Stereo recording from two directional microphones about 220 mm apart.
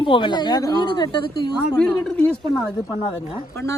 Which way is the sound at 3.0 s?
20° left (ahead or behind).